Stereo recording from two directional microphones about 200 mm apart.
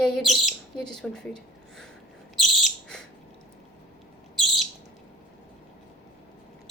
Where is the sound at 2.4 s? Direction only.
Centre (ahead or behind).